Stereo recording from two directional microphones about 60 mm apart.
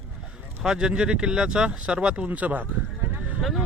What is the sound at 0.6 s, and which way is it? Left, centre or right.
Speech, centre.